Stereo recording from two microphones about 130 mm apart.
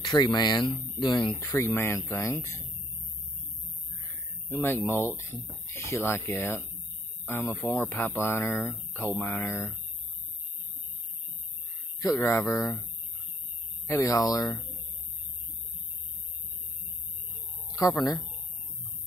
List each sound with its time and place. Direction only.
0.0 s speech: 30° left (ahead or behind)
1.4 s speech: 20° left (ahead or behind)
4.5 s speech: 15° left (ahead or behind)
12.0 s speech: 25° left (ahead or behind)
13.8 s speech: 25° left (ahead or behind)
18.0 s speech: 30° left (ahead or behind)